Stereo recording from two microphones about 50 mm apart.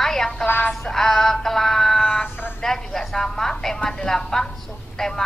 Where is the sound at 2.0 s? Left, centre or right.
Centre.